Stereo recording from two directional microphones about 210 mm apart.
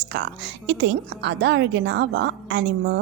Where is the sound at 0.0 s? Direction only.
55° right (ahead or behind).